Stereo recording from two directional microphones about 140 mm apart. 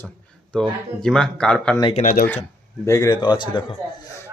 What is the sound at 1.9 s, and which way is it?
Speech, 65° left (ahead or behind).